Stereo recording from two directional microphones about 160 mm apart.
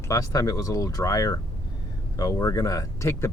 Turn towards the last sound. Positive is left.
turn(degrees=20)  # may be behind; listen again after turning